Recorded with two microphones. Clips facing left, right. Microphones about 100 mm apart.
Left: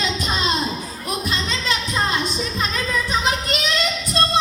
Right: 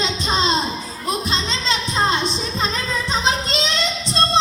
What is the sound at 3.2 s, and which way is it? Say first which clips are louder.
Child singing: right 1 dB; 25° right (ahead or behind).